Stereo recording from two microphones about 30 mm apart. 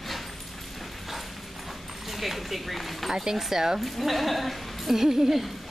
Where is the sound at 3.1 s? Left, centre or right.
Centre.